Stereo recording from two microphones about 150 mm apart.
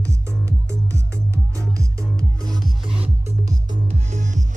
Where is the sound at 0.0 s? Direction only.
20° right (ahead or behind).